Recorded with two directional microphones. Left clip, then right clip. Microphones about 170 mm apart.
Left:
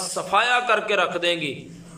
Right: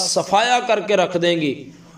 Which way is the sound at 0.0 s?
30° right (ahead or behind).